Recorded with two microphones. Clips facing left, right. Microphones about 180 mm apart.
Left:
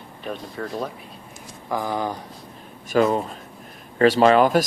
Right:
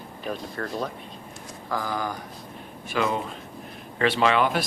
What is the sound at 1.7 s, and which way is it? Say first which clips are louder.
Speech: left 4 dB; 20° left (ahead or behind).